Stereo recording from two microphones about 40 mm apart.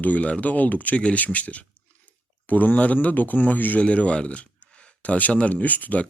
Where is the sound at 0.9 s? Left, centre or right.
Left.